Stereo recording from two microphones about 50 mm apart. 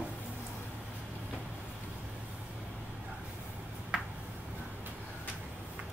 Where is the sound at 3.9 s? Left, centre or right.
Centre.